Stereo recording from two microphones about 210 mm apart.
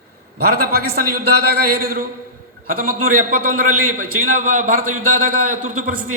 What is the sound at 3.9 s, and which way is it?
A man's voice, 40° right (ahead or behind).